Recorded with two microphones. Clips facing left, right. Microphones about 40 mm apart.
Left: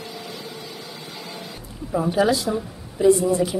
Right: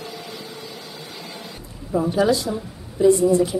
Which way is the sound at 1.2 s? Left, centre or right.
Centre.